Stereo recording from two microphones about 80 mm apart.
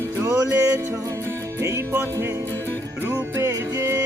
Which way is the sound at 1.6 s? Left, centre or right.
Right.